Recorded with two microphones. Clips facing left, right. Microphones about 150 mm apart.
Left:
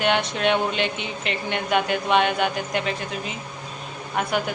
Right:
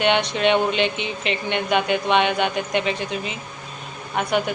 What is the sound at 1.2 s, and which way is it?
Speech, 75° right (ahead or behind).